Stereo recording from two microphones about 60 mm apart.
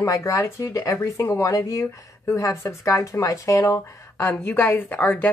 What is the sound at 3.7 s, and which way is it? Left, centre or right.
A woman's voice, left.